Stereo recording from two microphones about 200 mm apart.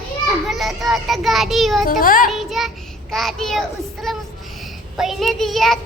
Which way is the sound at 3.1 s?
Centre (ahead or behind).